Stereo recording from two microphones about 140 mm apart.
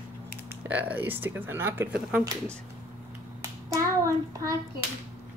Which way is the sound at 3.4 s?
20° right (ahead or behind).